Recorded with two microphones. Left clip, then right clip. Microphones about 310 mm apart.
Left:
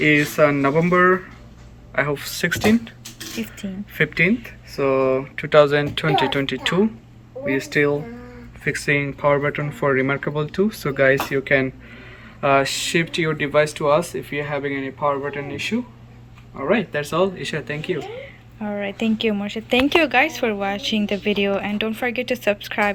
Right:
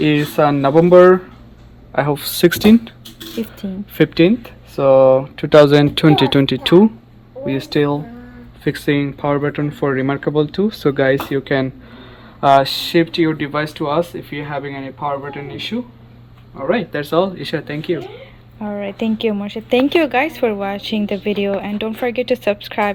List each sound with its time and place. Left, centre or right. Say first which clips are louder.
0.0 s speech: right 1 dB; right
3.4 s speech: right 6 dB; centre
3.9 s speech: right 5 dB; right
8.6 s speech: right 2 dB; centre